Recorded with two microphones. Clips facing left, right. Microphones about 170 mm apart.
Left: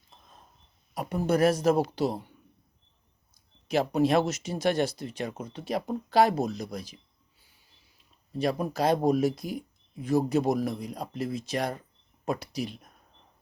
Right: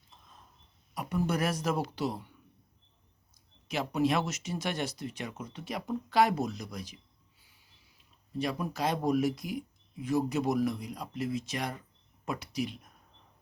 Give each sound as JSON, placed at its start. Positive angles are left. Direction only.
{"t": 0.9, "sound": "speech", "side_deg": 35}
{"t": 3.7, "sound": "speech", "side_deg": 35}
{"t": 8.3, "sound": "speech", "side_deg": 35}